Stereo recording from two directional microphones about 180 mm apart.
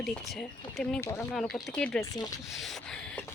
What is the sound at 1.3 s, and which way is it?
Speech, centre (ahead or behind).